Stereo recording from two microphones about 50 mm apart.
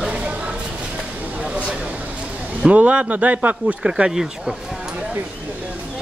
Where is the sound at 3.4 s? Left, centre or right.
Centre.